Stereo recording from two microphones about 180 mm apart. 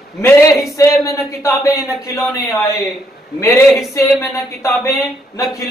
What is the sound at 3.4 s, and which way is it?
A man's voice, 15° left (ahead or behind).